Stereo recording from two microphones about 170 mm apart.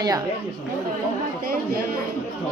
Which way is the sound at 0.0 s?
20° right (ahead or behind).